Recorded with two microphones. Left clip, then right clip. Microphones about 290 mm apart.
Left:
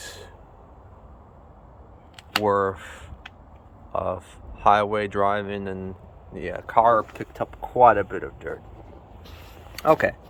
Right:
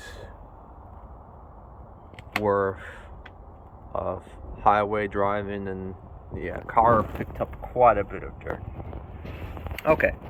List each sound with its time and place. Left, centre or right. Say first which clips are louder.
2.4 s speech: left 2 dB; centre
3.9 s speech: left 3 dB; centre
9.7 s speech: left 2 dB; centre